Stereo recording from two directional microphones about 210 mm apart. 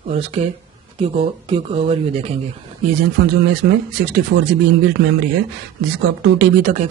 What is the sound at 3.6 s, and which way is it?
Speech, 50° right (ahead or behind).